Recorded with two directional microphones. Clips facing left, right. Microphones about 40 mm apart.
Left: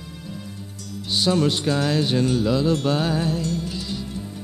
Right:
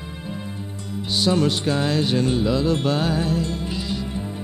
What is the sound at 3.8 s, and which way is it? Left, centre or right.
Music, right.